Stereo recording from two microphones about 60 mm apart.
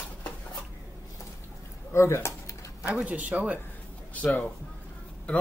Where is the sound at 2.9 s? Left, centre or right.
Right.